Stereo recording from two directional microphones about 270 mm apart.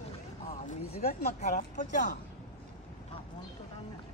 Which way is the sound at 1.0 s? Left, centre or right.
Left.